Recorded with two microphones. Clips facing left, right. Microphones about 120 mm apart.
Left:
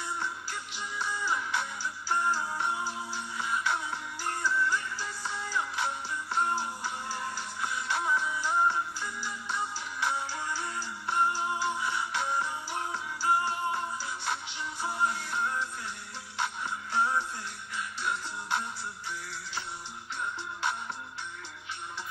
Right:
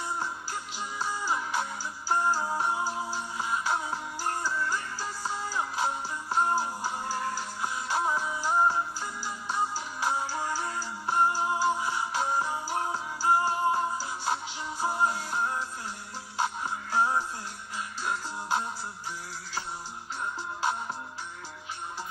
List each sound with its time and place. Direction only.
0.2 s music: 35° right (ahead or behind)